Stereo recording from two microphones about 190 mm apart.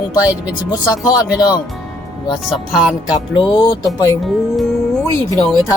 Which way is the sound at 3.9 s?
15° left (ahead or behind).